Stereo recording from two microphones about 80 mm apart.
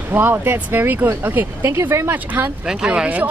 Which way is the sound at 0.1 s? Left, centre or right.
Right.